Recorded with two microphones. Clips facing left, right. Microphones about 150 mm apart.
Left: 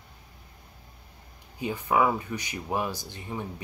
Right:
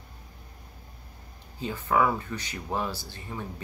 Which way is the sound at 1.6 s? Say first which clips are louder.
Left 1 dB; 15° left (ahead or behind).